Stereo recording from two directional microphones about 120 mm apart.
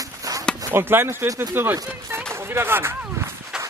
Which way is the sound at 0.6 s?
20° right (ahead or behind).